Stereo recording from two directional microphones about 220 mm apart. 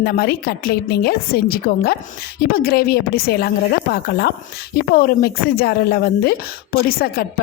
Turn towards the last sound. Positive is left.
turn(degrees=45)  # may be behind; listen again after turning